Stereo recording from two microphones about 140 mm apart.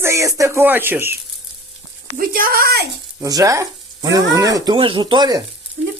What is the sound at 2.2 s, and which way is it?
Speech, 90° right.